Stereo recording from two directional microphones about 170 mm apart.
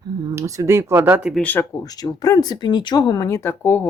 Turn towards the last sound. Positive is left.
turn(degrees=15)  # may be behind; listen again after turning